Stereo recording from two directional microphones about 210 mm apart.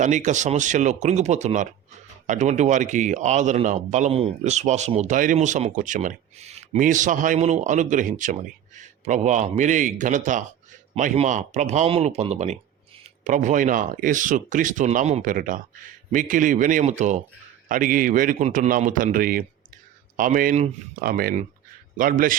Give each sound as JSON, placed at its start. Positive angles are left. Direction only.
{"t": 0.0, "sound": "a man's voice", "side_deg": -35}